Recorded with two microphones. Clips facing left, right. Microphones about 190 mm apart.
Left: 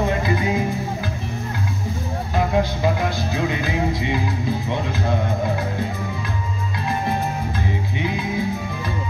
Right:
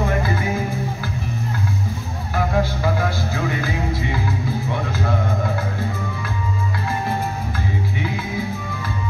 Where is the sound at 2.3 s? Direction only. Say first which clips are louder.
Even; 20° left (ahead or behind).